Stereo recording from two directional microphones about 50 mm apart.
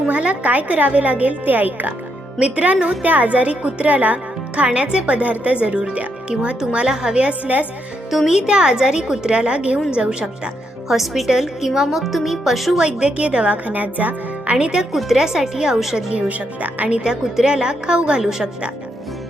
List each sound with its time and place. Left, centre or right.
0.1 s a woman's voice: right
8.1 s speech: centre
8.4 s a woman's voice: centre
10.8 s a woman's voice: centre
12.8 s a woman's voice: right
16.3 s a woman's voice: right
17.0 s a woman's voice: centre